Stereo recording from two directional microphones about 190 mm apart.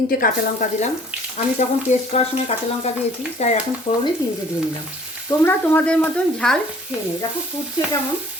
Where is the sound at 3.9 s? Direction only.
25° left (ahead or behind).